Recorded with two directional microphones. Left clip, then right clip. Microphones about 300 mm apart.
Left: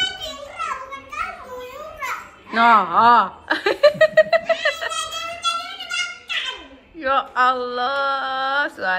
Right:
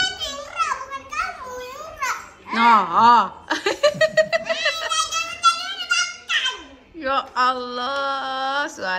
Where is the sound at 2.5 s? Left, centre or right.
Centre.